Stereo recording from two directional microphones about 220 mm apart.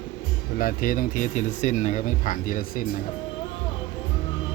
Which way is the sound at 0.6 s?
40° left (ahead or behind).